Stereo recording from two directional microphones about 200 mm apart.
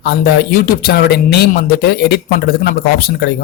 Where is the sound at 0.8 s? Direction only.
50° left (ahead or behind).